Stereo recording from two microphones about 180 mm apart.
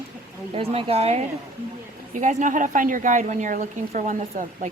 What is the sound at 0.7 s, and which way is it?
A woman's voice, 35° right (ahead or behind).